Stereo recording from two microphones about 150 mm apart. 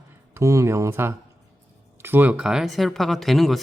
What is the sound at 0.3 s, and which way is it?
Speech, 20° right (ahead or behind).